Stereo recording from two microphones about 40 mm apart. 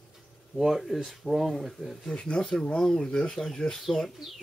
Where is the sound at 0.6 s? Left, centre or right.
Centre.